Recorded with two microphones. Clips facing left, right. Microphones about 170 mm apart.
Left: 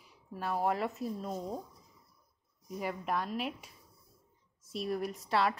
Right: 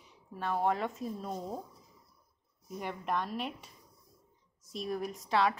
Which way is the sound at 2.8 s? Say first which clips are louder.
Even; 5° left (ahead or behind).